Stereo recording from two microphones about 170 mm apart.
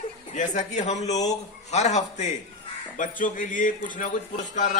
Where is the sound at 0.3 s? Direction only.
45° left (ahead or behind).